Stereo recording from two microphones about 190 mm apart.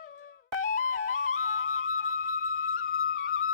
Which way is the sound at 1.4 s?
90° left.